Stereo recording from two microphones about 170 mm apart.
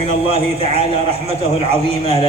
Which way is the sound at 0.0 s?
35° right (ahead or behind).